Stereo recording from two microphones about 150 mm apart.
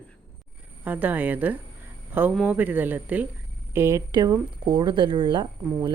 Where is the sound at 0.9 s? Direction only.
10° right (ahead or behind).